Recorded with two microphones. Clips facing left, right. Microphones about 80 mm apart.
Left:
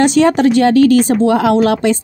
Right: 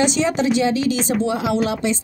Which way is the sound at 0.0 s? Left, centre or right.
Left.